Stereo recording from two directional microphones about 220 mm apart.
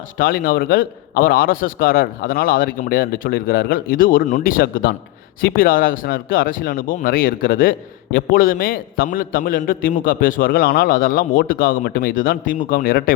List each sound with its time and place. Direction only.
0.2 s speech: 40° left (ahead or behind)